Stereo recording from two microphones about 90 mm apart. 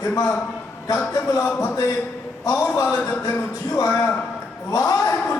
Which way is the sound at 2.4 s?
35° left (ahead or behind).